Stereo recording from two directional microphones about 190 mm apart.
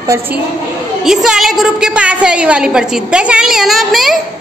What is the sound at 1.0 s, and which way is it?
A woman's voice, centre (ahead or behind).